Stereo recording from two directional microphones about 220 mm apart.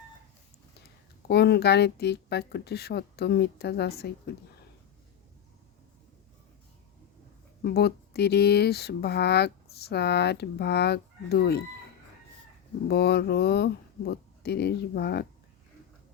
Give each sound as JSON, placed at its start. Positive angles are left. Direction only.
{"t": 1.3, "sound": "speech", "side_deg": 45}
{"t": 7.6, "sound": "speech", "side_deg": 45}
{"t": 12.9, "sound": "speech", "side_deg": 45}